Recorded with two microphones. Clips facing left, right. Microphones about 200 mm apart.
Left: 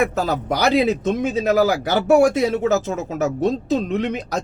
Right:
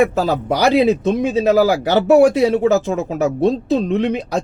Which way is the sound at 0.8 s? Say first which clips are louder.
Right 4 dB; 35° right (ahead or behind).